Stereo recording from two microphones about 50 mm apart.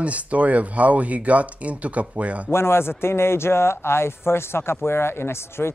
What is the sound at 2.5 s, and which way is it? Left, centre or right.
Speech, left.